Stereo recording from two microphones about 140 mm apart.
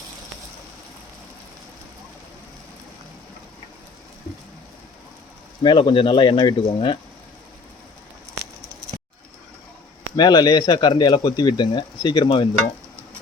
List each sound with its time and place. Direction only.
5.6 s speech: 35° left (ahead or behind)
10.2 s speech: 30° left (ahead or behind)